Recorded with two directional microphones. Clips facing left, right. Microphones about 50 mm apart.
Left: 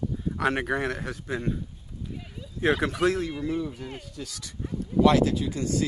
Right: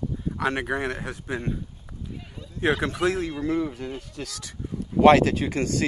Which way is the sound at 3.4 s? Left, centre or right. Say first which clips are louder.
Right 4 dB; right.